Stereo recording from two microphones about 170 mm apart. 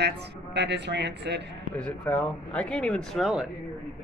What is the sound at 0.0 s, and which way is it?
A woman's voice, 90° right.